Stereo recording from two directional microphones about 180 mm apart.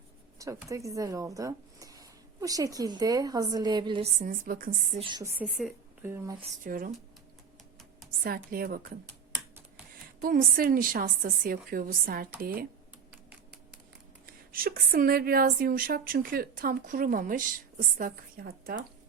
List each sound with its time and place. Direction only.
0.3 s speech: 15° right (ahead or behind)
4.2 s a woman's voice: 50° right (ahead or behind)
4.9 s a woman's voice: 25° right (ahead or behind)
5.5 s a woman's voice: centre (ahead or behind)
6.0 s speech: 15° right (ahead or behind)
6.6 s a woman's voice: 50° right (ahead or behind)
8.2 s a woman's voice: 55° right (ahead or behind)
10.2 s a woman's voice: 50° right (ahead or behind)
14.3 s a woman's voice: 55° right (ahead or behind)